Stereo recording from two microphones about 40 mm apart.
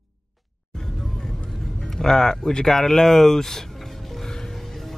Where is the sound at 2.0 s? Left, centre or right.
Centre.